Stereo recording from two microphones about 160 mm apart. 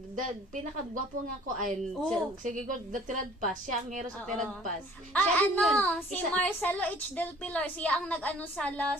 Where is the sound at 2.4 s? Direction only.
55° right (ahead or behind).